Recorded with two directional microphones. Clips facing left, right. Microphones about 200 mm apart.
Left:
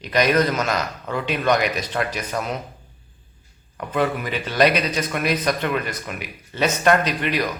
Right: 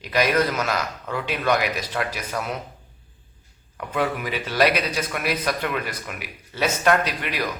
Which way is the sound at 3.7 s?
5° right (ahead or behind).